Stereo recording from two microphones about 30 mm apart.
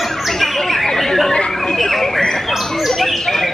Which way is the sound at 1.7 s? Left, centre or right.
Centre.